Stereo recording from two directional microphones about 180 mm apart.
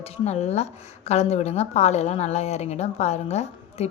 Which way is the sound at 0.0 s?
35° left (ahead or behind).